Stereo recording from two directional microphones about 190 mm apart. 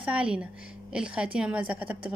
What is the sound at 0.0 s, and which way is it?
A woman's voice, 5° right (ahead or behind).